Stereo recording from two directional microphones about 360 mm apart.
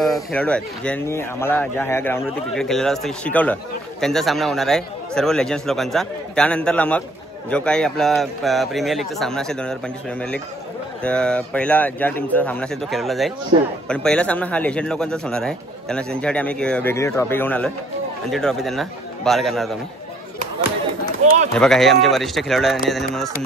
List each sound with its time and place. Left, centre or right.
0.0 s a man's voice: centre
21.2 s speech: centre
21.5 s a man's voice: centre